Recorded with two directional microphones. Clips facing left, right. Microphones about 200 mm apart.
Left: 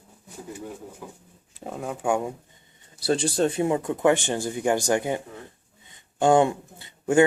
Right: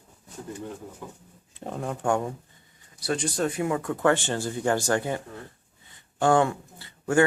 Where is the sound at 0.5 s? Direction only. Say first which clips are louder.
Even; 5° left (ahead or behind).